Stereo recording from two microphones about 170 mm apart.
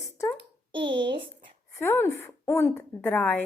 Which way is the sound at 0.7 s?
30° right (ahead or behind).